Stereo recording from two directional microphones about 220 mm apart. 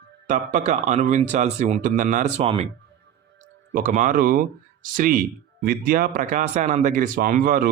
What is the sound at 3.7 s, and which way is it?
Speech, 35° right (ahead or behind).